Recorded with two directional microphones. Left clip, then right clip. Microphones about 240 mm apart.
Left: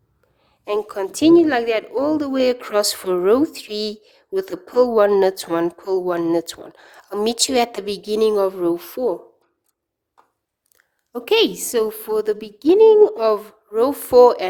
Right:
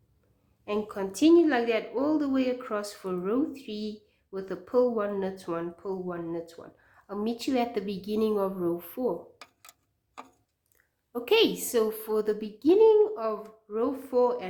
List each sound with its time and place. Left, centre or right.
0.6 s speech: left
11.1 s speech: left